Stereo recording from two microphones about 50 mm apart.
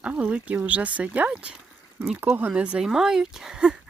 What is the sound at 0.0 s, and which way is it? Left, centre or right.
Speech, right.